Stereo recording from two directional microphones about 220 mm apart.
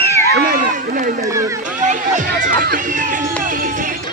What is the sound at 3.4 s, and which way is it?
Music, 35° right (ahead or behind).